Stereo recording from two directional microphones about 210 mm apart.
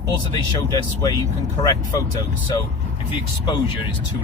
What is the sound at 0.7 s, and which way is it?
Speech, 20° left (ahead or behind).